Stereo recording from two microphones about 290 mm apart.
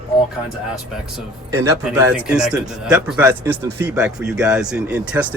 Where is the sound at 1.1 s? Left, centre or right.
Centre.